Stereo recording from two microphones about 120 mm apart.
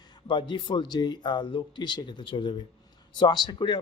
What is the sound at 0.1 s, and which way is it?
A man's voice, 40° left (ahead or behind).